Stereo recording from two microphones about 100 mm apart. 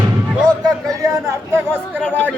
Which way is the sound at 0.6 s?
35° right (ahead or behind).